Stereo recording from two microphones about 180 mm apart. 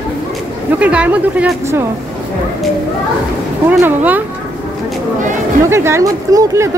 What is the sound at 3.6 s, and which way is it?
Speech, 10° right (ahead or behind).